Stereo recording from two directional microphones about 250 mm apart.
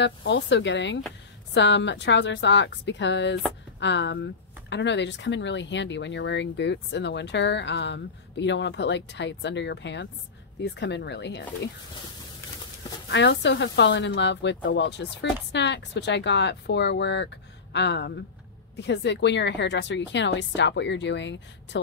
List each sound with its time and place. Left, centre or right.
0.0 s speech: left
13.1 s speech: left